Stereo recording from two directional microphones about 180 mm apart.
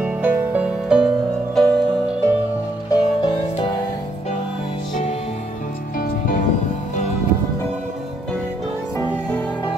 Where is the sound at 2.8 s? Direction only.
20° left (ahead or behind).